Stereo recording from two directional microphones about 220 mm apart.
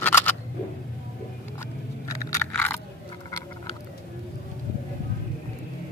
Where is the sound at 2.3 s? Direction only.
10° left (ahead or behind).